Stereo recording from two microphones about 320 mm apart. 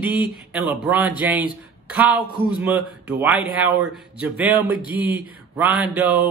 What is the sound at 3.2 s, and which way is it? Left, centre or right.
Speech, centre.